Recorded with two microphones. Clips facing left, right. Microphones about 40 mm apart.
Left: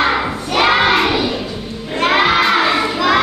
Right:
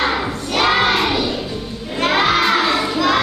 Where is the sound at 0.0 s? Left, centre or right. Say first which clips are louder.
Left 3 dB; left.